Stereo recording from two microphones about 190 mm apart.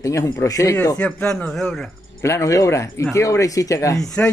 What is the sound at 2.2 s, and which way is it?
Speech, 15° left (ahead or behind).